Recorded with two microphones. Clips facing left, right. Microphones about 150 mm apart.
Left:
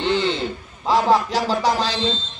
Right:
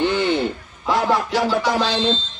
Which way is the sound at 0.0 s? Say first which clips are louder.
Right 2 dB; 30° left (ahead or behind).